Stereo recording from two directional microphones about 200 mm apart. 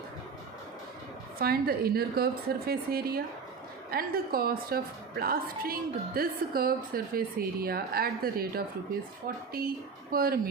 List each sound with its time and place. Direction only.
1.4 s a woman's voice: 50° right (ahead or behind)